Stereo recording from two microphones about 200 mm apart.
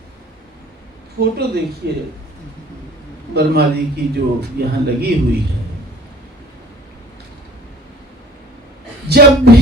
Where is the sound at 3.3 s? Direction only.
55° right (ahead or behind).